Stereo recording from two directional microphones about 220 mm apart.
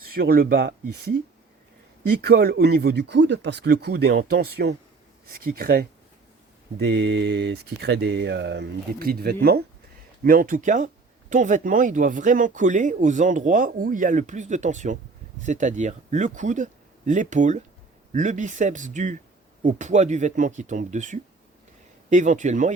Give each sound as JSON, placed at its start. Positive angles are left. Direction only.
{"t": 0.1, "sound": "speech", "side_deg": -45}
{"t": 2.2, "sound": "speech", "side_deg": -45}